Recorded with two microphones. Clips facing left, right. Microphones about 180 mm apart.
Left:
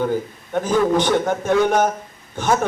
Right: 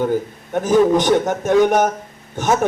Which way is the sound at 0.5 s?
15° right (ahead or behind).